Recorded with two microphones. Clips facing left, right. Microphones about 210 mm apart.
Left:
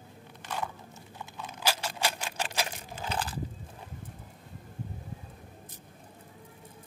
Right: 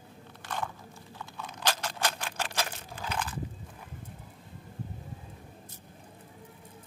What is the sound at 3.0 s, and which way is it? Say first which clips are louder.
Biting: left 1 dB; 35° left (ahead or behind).